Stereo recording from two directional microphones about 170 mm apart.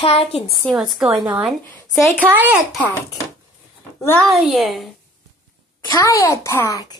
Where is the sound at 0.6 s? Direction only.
Centre (ahead or behind).